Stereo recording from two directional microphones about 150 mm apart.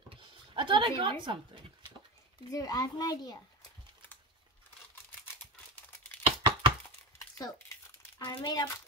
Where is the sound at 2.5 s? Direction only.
25° left (ahead or behind).